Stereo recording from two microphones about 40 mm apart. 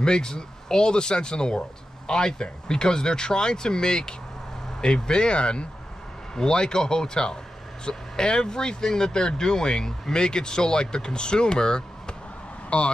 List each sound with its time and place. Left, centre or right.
0.0 s speech: centre